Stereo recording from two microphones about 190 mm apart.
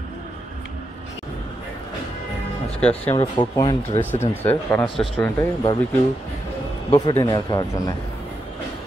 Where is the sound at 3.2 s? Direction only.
20° left (ahead or behind).